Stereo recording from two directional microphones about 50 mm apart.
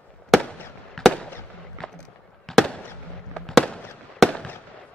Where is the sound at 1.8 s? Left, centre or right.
Centre.